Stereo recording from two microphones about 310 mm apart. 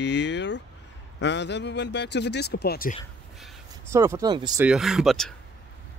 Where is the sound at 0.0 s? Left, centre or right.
Left.